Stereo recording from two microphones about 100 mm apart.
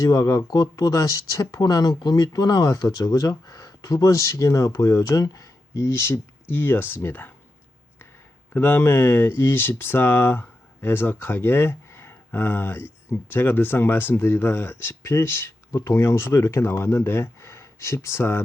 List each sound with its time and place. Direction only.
0.0 s speech: 40° left (ahead or behind); by 7.3 s 20° left (ahead or behind)
8.5 s speech: 20° left (ahead or behind)